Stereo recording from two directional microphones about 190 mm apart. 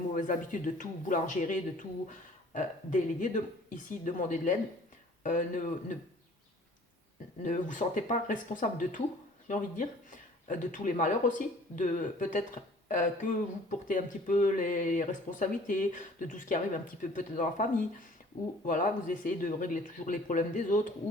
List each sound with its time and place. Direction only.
0.1 s speech: 45° left (ahead or behind)
7.4 s speech: 40° left (ahead or behind)